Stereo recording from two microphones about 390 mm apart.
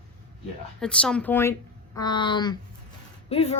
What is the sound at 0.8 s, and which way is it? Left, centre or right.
Speech, centre.